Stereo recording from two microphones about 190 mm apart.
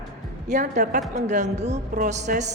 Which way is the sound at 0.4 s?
40° right (ahead or behind).